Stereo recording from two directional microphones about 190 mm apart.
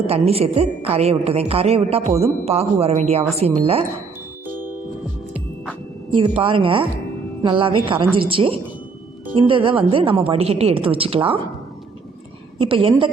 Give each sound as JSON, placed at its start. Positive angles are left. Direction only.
{"t": 0.1, "sound": "a woman's voice", "side_deg": -30}
{"t": 6.1, "sound": "a woman's voice", "side_deg": -25}
{"t": 12.5, "sound": "a woman's voice", "side_deg": -30}